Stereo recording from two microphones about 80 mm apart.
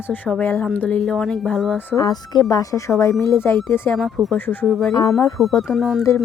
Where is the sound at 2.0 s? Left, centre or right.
Left.